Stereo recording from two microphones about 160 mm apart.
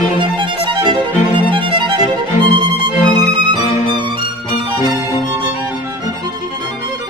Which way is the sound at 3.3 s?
30° right (ahead or behind).